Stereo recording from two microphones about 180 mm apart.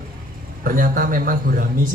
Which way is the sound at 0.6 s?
50° right (ahead or behind).